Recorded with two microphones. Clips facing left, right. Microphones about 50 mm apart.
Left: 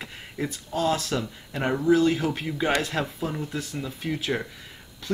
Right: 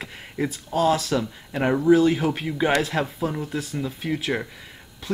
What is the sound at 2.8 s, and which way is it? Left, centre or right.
Speech, centre.